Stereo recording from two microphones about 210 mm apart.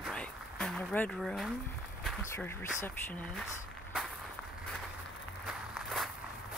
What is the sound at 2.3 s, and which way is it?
Speech, 10° left (ahead or behind).